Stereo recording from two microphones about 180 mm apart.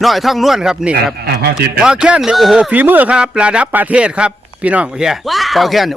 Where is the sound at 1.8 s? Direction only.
5° right (ahead or behind).